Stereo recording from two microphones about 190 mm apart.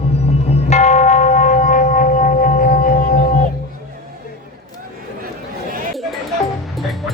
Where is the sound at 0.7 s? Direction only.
35° left (ahead or behind).